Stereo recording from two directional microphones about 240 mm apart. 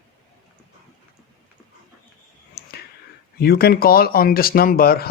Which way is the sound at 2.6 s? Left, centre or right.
Left.